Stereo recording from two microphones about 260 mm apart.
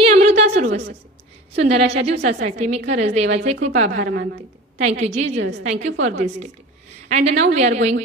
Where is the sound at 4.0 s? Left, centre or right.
Right.